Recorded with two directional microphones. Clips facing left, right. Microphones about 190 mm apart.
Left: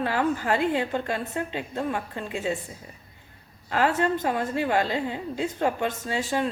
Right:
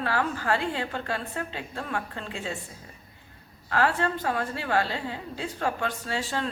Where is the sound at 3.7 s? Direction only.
20° left (ahead or behind).